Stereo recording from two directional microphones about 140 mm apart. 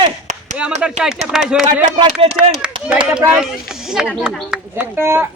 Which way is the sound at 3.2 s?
5° right (ahead or behind).